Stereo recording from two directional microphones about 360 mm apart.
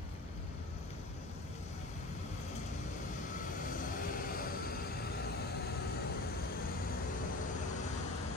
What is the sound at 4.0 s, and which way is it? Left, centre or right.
Vehicle, left.